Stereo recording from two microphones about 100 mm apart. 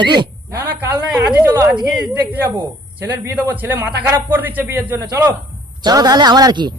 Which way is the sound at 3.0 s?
20° right (ahead or behind).